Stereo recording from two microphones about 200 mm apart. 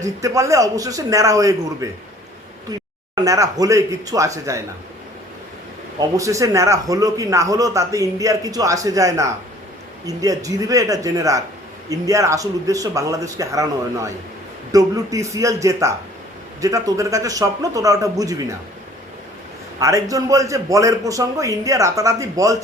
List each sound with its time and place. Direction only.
0.0 s a man's voice: 15° right (ahead or behind)
3.2 s a man's voice: 15° right (ahead or behind)
6.0 s a man's voice: 15° right (ahead or behind)
19.8 s a man's voice: 15° right (ahead or behind)